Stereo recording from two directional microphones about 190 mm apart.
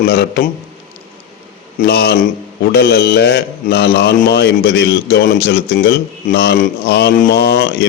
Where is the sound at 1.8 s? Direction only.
60° left (ahead or behind).